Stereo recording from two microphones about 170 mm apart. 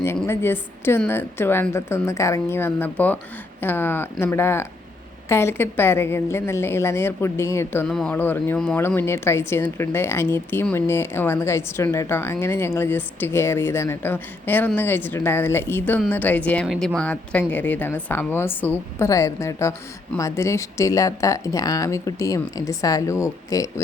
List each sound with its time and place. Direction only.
0.3 s a woman's voice: 15° left (ahead or behind)